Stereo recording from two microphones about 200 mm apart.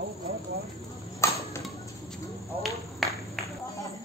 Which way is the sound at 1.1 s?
15° left (ahead or behind).